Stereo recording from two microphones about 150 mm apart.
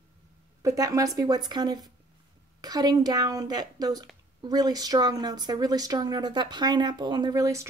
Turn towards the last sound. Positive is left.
turn(degrees=-20)  # may be behind; listen again after turning